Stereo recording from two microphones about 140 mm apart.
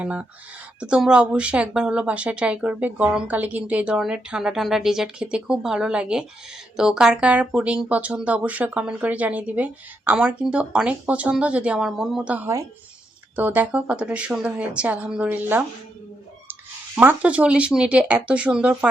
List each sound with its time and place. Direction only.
0.0 s speech: 10° right (ahead or behind)
16.9 s speech: 10° right (ahead or behind)